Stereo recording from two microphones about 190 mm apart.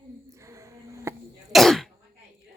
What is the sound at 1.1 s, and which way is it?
Cough, 15° right (ahead or behind).